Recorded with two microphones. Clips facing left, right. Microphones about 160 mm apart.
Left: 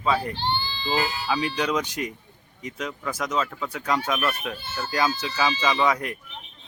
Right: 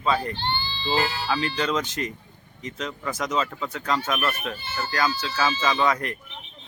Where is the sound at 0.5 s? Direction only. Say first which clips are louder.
Left 1 dB; 40° left (ahead or behind).